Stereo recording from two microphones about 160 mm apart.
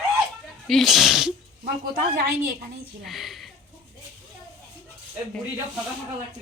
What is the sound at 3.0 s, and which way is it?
Speech, centre (ahead or behind).